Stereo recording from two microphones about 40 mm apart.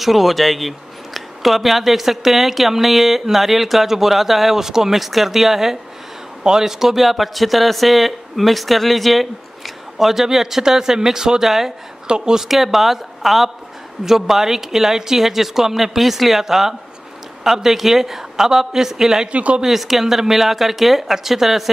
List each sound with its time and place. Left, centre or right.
0.0 s speech: centre
12.4 s speech: centre
19.3 s speech: right
19.6 s speech: centre